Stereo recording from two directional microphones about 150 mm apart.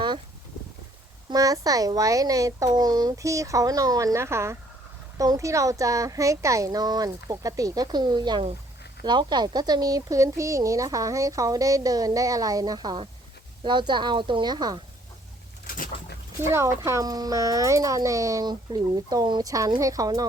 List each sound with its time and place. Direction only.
1.3 s a woman's voice: 25° right (ahead or behind)
15.6 s bird: 75° left (ahead or behind)
16.5 s a woman's voice: 20° right (ahead or behind)